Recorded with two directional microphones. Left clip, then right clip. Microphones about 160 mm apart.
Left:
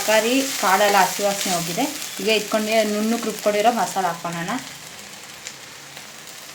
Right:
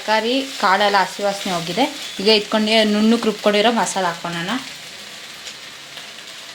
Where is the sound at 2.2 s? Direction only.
40° right (ahead or behind).